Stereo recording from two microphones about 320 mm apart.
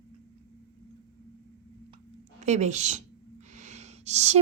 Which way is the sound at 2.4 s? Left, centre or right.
Right.